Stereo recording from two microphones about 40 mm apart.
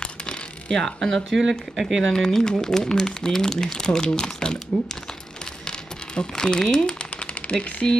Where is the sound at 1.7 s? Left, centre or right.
Centre.